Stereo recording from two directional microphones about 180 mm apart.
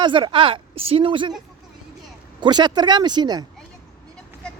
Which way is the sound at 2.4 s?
25° right (ahead or behind).